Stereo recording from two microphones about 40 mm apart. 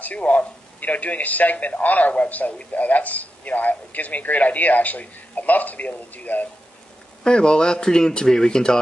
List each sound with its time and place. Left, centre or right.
0.0 s a man's voice: left
7.2 s a man's voice: left